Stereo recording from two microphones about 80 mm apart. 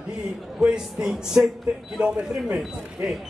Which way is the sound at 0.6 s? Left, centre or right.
Centre.